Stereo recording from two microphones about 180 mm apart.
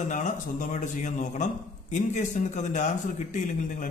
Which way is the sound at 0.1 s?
45° left (ahead or behind).